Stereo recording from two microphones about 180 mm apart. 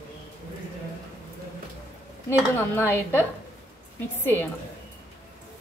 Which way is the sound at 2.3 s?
15° left (ahead or behind).